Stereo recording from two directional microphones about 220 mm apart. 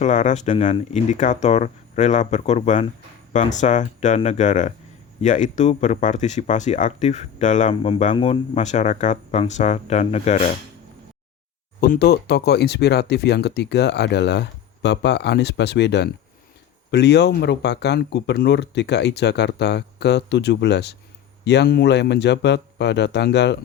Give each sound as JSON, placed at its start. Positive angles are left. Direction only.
{"t": 0.0, "sound": "speech", "side_deg": 35}
{"t": 11.8, "sound": "speech", "side_deg": 45}